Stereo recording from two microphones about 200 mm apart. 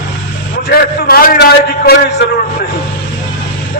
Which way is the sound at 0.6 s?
50° left (ahead or behind).